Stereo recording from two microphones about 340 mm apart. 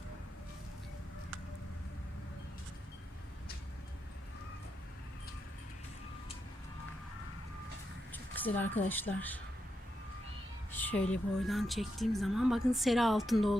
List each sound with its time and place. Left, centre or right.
8.1 s speech: centre
10.7 s a woman's voice: centre